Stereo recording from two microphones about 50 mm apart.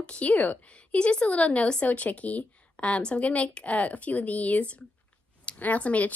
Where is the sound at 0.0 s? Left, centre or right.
Left.